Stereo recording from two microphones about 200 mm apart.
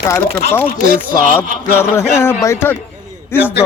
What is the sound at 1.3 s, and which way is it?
Speech, 10° left (ahead or behind).